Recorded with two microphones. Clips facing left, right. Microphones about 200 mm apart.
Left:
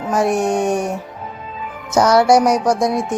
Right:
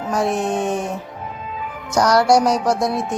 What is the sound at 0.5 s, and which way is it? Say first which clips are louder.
Speech: left 3 dB; 15° left (ahead or behind).